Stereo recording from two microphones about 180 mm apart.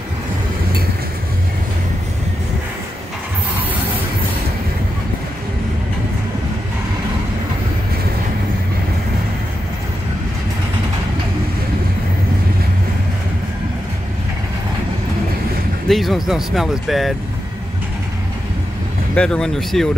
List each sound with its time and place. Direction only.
15.9 s speech: centre (ahead or behind)
19.1 s speech: 5° left (ahead or behind)